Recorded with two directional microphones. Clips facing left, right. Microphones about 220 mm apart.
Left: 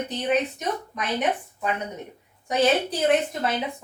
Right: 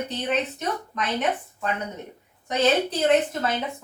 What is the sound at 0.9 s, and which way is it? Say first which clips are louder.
Speech: right 2 dB; 10° left (ahead or behind).